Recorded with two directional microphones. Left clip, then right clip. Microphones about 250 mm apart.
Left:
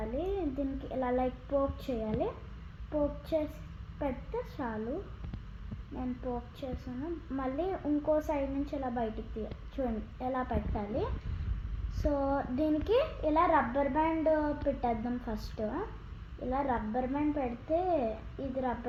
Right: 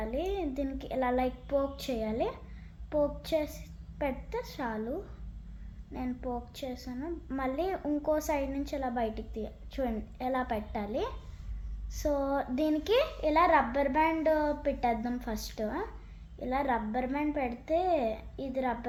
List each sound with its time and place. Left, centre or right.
0.0 s a child's voice: centre
4.5 s a woman's voice: right